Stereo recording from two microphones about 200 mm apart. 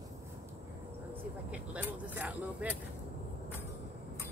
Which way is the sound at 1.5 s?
10° right (ahead or behind).